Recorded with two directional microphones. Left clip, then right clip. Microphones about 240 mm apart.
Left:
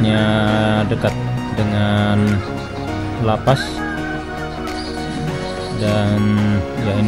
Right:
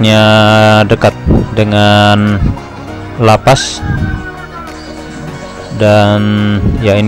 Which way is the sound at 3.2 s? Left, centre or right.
Right.